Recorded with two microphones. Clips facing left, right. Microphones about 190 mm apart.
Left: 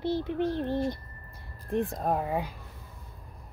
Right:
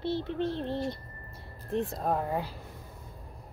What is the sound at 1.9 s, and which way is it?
Child singing, 10° left (ahead or behind).